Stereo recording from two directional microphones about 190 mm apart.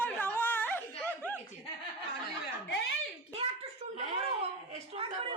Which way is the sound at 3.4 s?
30° right (ahead or behind).